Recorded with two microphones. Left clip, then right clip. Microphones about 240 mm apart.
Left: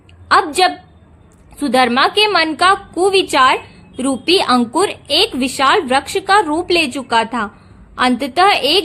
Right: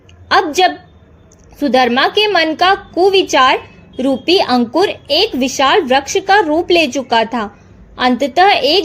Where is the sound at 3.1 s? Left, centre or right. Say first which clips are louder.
Right 1 dB; left.